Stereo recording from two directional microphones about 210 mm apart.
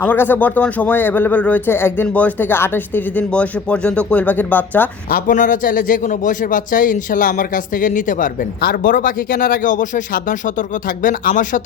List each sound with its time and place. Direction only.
0.0 s speech: 10° left (ahead or behind)
5.0 s a man's voice: 40° left (ahead or behind)